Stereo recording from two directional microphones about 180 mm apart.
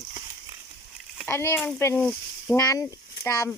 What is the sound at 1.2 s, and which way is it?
Speech, 15° left (ahead or behind).